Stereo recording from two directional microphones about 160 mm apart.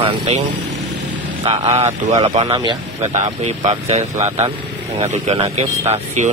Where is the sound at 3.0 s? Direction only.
45° right (ahead or behind).